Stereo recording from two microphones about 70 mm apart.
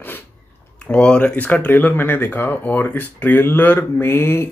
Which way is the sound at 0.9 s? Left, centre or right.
Centre.